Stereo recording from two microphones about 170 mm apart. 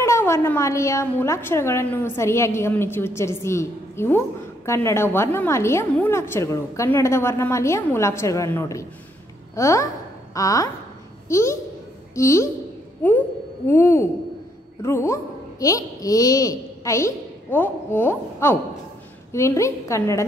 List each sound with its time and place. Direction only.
0.0 s a woman's voice: 15° left (ahead or behind)
13.7 s a woman's voice: 15° left (ahead or behind)